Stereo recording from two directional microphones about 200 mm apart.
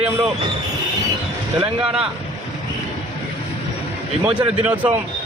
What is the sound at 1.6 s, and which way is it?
Speech, 5° right (ahead or behind).